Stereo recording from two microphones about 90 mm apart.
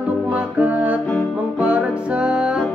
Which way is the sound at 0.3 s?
15° right (ahead or behind).